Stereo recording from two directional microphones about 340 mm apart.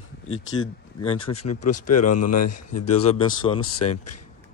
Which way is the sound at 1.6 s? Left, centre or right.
Left.